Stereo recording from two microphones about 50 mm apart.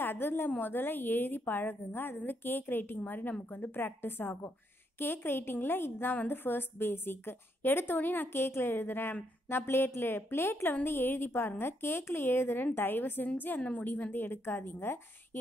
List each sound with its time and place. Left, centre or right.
0.0 s a woman's voice: left
13.6 s a woman's voice: left